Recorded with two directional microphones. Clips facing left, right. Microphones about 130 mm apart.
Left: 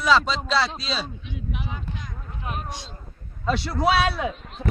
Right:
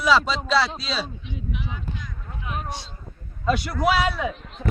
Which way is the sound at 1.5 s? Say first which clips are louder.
Even; 50° left (ahead or behind).